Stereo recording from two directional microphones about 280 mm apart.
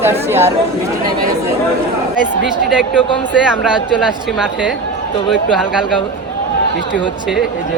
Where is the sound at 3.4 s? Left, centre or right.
Centre.